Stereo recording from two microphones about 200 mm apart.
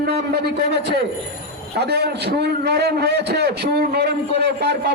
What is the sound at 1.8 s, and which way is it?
A man's voice, 55° right (ahead or behind).